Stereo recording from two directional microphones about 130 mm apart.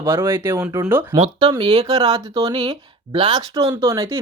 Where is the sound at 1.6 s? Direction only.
50° right (ahead or behind).